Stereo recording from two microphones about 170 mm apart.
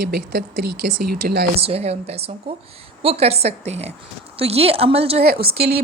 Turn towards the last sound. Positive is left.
turn(degrees=-70)  # may be behind; listen again after turning